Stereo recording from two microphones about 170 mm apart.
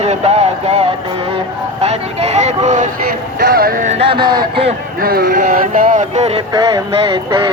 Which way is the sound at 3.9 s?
30° right (ahead or behind).